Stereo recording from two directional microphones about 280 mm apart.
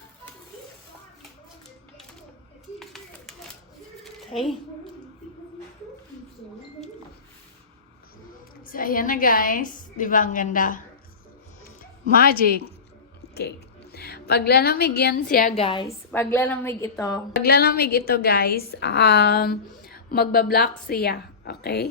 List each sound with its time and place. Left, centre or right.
2.7 s a sound: centre
8.7 s a woman's voice: left
12.0 s a woman's voice: left
13.9 s a woman's voice: left
16.1 s a woman's voice: centre
17.4 s a woman's voice: left